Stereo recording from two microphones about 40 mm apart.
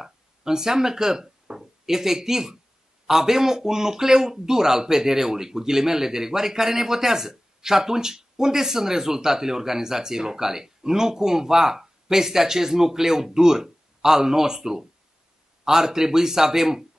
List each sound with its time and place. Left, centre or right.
0.0 s speech: centre